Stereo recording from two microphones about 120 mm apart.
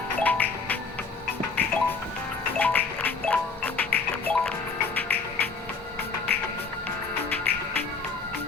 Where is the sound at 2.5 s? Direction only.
15° left (ahead or behind).